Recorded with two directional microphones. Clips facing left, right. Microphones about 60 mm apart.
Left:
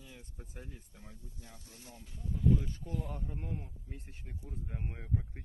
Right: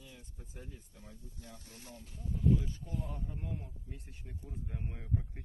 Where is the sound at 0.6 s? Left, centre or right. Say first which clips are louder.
Even; left.